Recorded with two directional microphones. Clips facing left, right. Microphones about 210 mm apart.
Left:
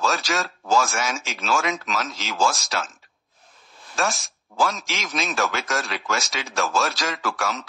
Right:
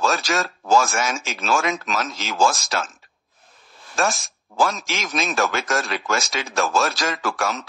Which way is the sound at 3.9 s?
50° right (ahead or behind).